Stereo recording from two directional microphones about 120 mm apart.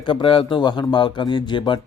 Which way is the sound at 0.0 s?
45° left (ahead or behind).